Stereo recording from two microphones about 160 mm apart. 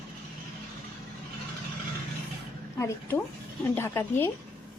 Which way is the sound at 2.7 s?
20° left (ahead or behind).